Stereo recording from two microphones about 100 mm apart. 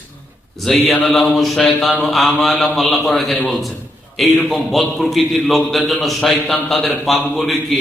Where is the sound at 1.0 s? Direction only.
Centre (ahead or behind).